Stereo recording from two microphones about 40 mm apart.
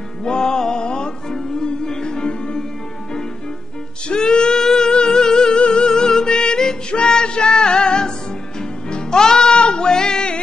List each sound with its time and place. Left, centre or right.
0.2 s music: centre
4.1 s music: left